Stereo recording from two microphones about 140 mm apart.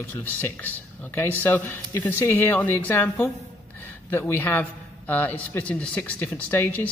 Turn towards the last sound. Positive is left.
turn(degrees=15)  # may be behind; listen again after turning